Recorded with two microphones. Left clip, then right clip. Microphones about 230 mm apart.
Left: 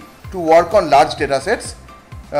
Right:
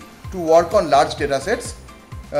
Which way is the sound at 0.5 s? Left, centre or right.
Centre.